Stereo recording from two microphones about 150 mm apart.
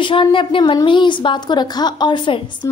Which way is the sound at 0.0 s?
35° left (ahead or behind).